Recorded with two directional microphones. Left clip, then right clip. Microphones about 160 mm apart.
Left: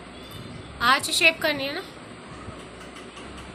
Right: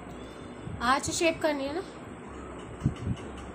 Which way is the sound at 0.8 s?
20° right (ahead or behind).